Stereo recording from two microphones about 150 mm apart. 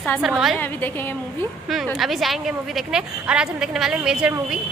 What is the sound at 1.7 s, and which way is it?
A woman's voice, centre (ahead or behind).